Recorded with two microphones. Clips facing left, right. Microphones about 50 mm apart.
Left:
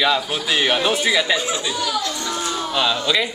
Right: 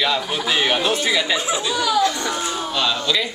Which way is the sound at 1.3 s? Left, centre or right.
Centre.